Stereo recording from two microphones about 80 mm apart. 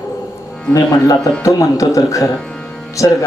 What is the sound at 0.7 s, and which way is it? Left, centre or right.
A man's voice, left.